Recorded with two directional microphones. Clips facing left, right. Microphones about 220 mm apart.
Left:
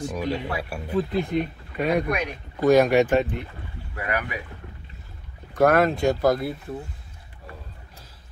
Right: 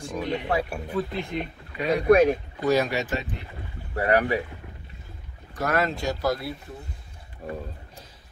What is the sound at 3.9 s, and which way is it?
Speech, 35° right (ahead or behind).